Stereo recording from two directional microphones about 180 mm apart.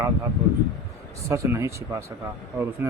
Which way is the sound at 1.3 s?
15° right (ahead or behind).